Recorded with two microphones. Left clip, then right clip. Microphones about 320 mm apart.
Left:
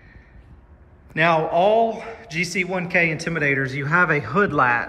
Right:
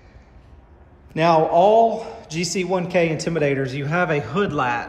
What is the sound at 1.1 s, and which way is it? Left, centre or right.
A man's voice, centre.